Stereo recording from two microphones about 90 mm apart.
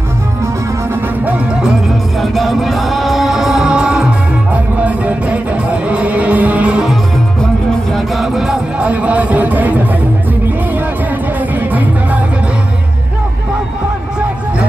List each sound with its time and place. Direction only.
1.2 s music: 10° right (ahead or behind)
2.3 s music: centre (ahead or behind)
7.9 s music: centre (ahead or behind)
8.8 s music: 15° right (ahead or behind)
11.7 s music: 20° right (ahead or behind)